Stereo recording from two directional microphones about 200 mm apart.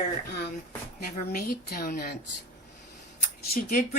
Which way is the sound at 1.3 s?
50° left (ahead or behind).